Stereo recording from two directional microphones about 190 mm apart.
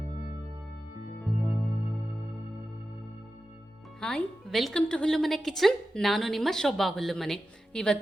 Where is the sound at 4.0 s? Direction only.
5° left (ahead or behind).